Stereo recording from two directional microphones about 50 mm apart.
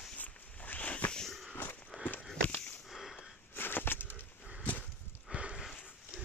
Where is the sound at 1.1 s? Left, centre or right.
Centre.